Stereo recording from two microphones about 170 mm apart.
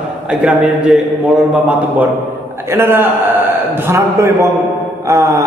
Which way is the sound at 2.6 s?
15° right (ahead or behind).